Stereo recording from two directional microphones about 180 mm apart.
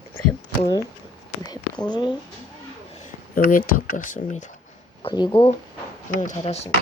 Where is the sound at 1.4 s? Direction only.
25° left (ahead or behind).